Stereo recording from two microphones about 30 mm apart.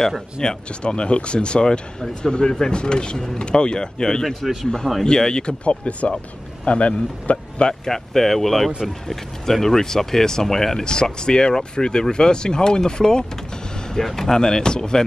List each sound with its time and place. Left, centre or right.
0.4 s speech: left
5.7 s speech: left
7.8 s speech: centre